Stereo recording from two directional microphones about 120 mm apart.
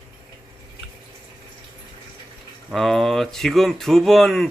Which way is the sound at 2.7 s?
Centre (ahead or behind).